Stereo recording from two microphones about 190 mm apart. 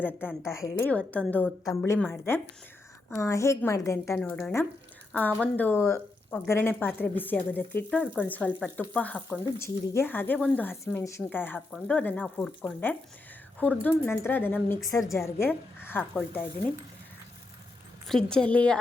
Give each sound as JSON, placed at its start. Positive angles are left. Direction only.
{"t": 0.2, "sound": "speech", "side_deg": -5}
{"t": 0.8, "sound": "speech", "side_deg": 5}
{"t": 18.1, "sound": "speech", "side_deg": 5}